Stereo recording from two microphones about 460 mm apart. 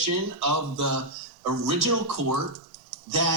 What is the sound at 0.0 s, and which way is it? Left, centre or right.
A man's voice, right.